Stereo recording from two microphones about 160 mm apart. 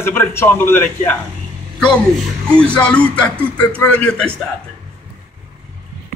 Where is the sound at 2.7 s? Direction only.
5° left (ahead or behind).